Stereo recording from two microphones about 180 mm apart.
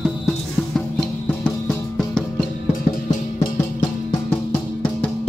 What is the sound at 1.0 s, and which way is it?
Music, 5° left (ahead or behind).